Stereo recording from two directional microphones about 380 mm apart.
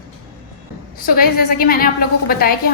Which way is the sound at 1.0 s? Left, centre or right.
Left.